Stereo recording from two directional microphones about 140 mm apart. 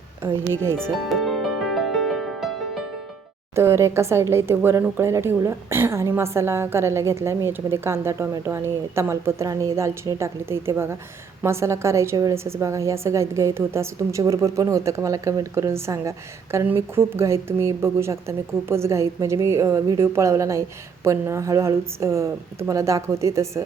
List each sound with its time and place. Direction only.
0.5 s speech: 20° right (ahead or behind)
0.8 s music: centre (ahead or behind)
3.5 s a woman's voice: 20° right (ahead or behind)